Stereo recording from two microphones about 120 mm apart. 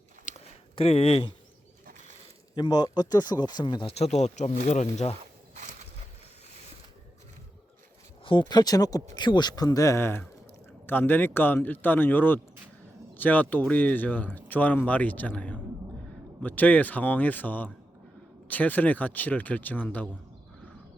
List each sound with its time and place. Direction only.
0.3 s a sound: 60° left (ahead or behind)
2.6 s speech: 35° left (ahead or behind)
3.9 s speech: 65° left (ahead or behind)
8.2 s speech: 45° left (ahead or behind); by 20.1 s 15° left (ahead or behind)